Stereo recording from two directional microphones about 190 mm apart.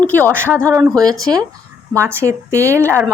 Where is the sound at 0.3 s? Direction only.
10° right (ahead or behind).